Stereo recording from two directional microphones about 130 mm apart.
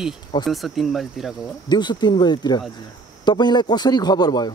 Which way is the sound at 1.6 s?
35° left (ahead or behind).